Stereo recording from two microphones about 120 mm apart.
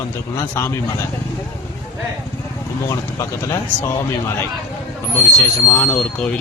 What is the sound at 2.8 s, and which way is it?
Speech, 25° left (ahead or behind).